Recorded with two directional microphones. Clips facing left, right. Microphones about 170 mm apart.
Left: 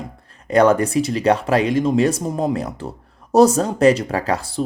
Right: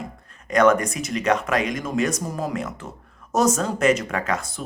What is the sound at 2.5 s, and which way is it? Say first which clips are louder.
Speech: left 4 dB; 35° left (ahead or behind).